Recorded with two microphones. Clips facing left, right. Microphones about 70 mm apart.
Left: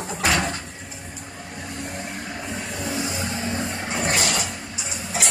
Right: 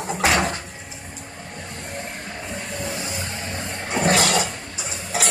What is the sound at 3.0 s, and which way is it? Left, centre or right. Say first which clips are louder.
Vehicle: left 3 dB; left.